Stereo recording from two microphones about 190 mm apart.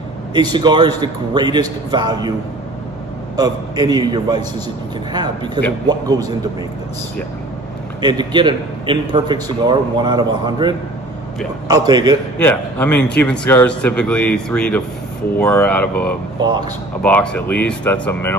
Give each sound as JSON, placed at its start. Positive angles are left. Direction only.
{"t": 0.3, "sound": "a man's voice", "side_deg": -20}
{"t": 3.3, "sound": "a man's voice", "side_deg": -20}
{"t": 8.0, "sound": "a man's voice", "side_deg": -25}
{"t": 12.4, "sound": "a man's voice", "side_deg": 10}
{"t": 16.4, "sound": "a man's voice", "side_deg": -20}
{"t": 17.0, "sound": "a man's voice", "side_deg": 5}